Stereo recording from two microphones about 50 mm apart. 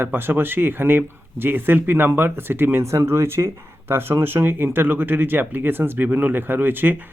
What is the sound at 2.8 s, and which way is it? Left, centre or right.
Speech, right.